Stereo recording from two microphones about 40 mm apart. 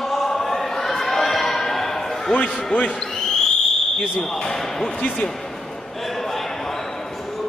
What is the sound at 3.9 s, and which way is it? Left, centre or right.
Speech, centre.